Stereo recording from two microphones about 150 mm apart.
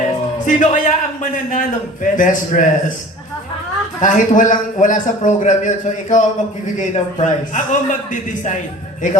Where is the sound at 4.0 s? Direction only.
60° left (ahead or behind).